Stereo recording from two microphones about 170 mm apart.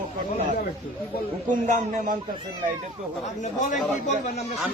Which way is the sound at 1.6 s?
50° right (ahead or behind).